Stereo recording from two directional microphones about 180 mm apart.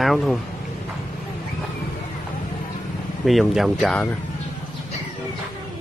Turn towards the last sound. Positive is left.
turn(degrees=5)  # may be behind; listen again after turning